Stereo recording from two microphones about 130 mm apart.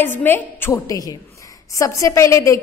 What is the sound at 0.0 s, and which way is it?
A woman's voice, 15° left (ahead or behind).